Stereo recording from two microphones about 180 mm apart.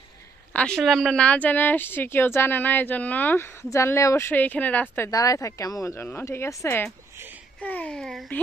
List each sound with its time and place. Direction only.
0.5 s a woman's voice: 5° left (ahead or behind)